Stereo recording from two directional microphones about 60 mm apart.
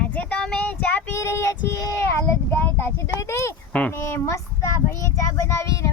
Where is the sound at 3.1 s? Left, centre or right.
Left.